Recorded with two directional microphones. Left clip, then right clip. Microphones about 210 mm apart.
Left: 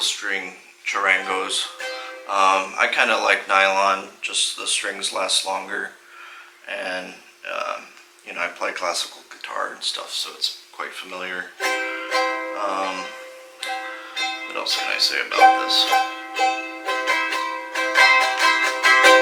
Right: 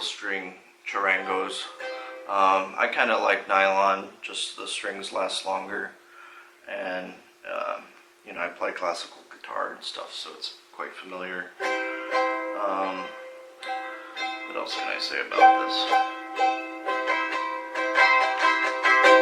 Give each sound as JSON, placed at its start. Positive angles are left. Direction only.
{"t": 0.0, "sound": "speech", "side_deg": -5}
{"t": 6.7, "sound": "a sound", "side_deg": -5}
{"t": 8.3, "sound": "speech", "side_deg": -10}
{"t": 9.8, "sound": "speech", "side_deg": -5}
{"t": 13.6, "sound": "music", "side_deg": -10}